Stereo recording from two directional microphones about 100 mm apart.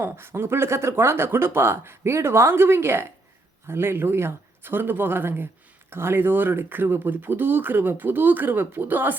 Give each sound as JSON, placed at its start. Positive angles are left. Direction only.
{"t": 0.0, "sound": "speech", "side_deg": -25}